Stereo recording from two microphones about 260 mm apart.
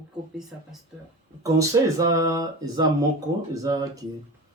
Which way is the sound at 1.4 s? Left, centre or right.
Centre.